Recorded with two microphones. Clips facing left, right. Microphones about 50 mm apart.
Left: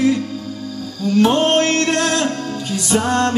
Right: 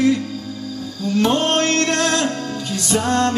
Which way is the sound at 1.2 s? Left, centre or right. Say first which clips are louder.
Left 3 dB; centre.